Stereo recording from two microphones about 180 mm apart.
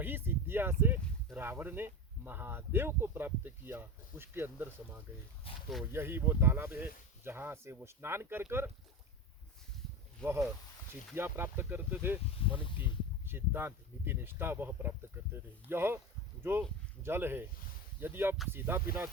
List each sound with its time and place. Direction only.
0.0 s speech: 10° right (ahead or behind)
5.5 s speech: 30° left (ahead or behind)
5.9 s speech: 10° right (ahead or behind)
10.2 s speech: 5° left (ahead or behind)
11.1 s speech: 10° right (ahead or behind)
13.2 s speech: 10° right (ahead or behind)